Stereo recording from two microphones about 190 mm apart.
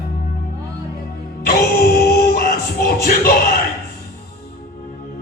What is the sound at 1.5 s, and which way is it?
Music, 55° left (ahead or behind).